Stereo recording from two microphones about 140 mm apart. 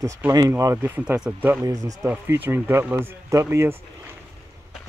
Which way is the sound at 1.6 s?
25° right (ahead or behind).